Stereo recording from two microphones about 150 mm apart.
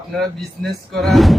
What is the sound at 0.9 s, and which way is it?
Speech, centre (ahead or behind).